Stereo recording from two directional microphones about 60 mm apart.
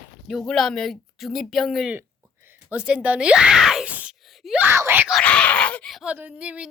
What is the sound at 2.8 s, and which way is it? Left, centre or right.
Speech, centre.